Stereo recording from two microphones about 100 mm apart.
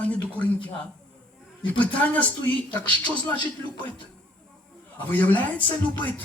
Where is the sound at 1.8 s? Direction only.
15° left (ahead or behind).